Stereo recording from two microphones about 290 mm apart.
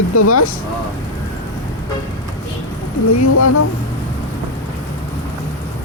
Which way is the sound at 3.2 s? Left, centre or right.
Left.